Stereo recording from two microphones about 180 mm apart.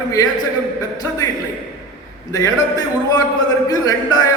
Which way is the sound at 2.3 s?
20° left (ahead or behind).